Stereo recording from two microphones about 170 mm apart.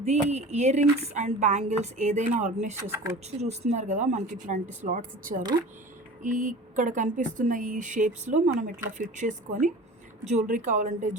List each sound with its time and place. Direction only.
0.0 s speech: 40° right (ahead or behind)
2.8 s speech: 15° right (ahead or behind)
3.4 s speech: 40° right (ahead or behind)